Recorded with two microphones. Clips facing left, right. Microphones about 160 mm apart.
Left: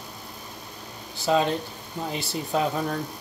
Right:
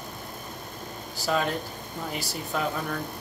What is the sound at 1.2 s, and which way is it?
Speech, 25° left (ahead or behind).